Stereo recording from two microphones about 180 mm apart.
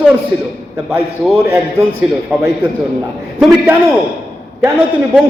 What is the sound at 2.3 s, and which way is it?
Speech, 5° right (ahead or behind).